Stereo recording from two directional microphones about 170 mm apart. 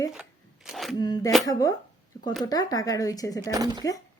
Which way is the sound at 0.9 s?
25° left (ahead or behind).